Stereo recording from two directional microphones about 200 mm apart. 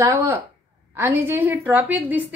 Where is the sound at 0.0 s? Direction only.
15° right (ahead or behind).